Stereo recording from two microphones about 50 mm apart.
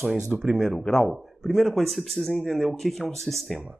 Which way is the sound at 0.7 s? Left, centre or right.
Centre.